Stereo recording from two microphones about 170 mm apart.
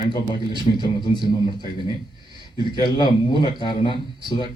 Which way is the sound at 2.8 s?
25° left (ahead or behind).